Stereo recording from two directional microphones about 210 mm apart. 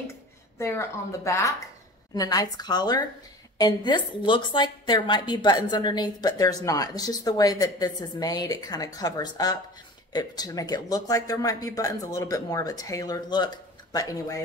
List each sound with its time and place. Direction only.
0.6 s a woman's voice: 15° left (ahead or behind)